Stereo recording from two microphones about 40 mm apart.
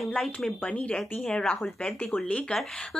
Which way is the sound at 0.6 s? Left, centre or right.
Left.